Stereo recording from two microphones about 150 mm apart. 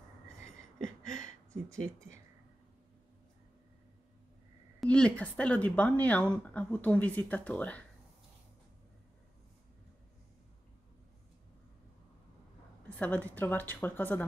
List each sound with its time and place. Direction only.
1.2 s a sound: 20° right (ahead or behind)
4.7 s speech: 5° left (ahead or behind)
13.0 s speech: 10° left (ahead or behind)